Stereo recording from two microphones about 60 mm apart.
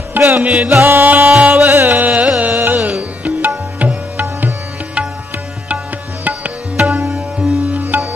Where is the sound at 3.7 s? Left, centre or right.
Right.